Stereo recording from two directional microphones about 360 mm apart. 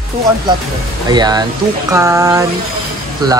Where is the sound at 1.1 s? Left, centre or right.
Centre.